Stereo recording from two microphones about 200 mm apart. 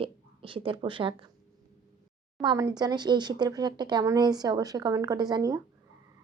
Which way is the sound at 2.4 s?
20° right (ahead or behind).